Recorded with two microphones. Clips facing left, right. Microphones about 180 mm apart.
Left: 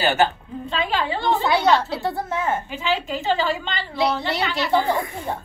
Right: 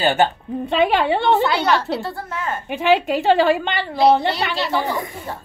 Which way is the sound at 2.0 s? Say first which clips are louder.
Left 3 dB; 20° left (ahead or behind).